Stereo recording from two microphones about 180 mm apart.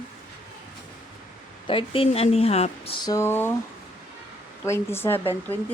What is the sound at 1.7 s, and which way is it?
A woman's voice, 30° left (ahead or behind).